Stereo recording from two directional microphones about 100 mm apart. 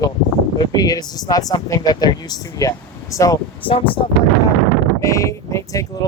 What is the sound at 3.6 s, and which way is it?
Speech, 60° left (ahead or behind).